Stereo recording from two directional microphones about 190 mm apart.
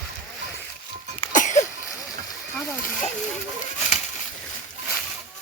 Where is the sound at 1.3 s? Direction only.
40° left (ahead or behind).